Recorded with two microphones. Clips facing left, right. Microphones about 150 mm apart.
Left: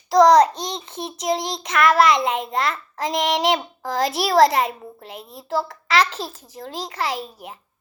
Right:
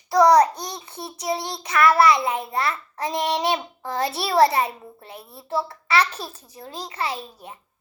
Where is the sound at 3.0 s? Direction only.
90° left.